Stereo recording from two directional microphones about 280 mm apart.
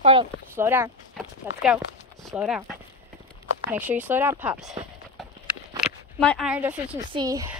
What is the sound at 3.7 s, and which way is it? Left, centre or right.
Clip-clop, centre.